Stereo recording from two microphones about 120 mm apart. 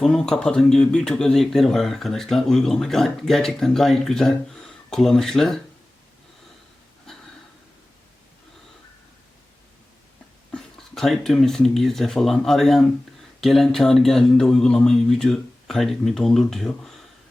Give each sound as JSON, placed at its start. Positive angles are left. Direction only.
{"t": 0.0, "sound": "speech", "side_deg": 5}
{"t": 10.5, "sound": "speech", "side_deg": 5}